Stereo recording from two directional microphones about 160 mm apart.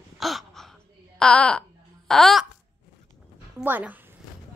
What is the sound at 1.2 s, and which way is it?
Speech, 5° left (ahead or behind).